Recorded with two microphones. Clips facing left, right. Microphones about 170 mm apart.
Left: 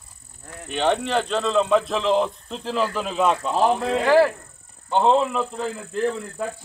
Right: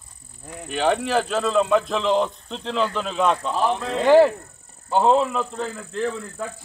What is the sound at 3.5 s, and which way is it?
Speech, 45° left (ahead or behind).